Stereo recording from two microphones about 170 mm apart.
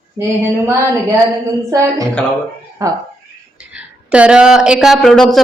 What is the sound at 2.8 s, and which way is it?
Speech, 20° right (ahead or behind).